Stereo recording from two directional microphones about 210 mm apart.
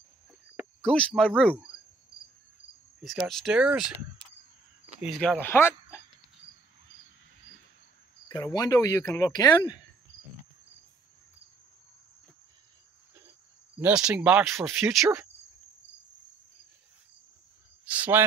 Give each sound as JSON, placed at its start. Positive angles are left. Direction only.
{"t": 0.6, "sound": "speech", "side_deg": 5}
{"t": 3.0, "sound": "speech", "side_deg": 0}
{"t": 5.0, "sound": "speech", "side_deg": -5}
{"t": 5.4, "sound": "speech", "side_deg": 10}
{"t": 8.5, "sound": "speech", "side_deg": 15}
{"t": 13.7, "sound": "speech", "side_deg": -5}
{"t": 17.8, "sound": "cricket", "side_deg": -10}